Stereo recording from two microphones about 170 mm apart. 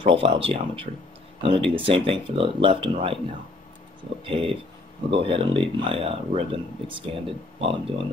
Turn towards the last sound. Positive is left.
turn(degrees=-35)  # may be behind; listen again after turning